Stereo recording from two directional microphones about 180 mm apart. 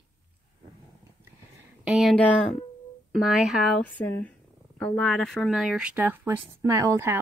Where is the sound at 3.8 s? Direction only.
10° left (ahead or behind).